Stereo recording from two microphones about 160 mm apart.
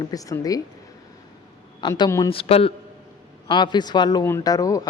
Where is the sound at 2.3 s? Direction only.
35° left (ahead or behind).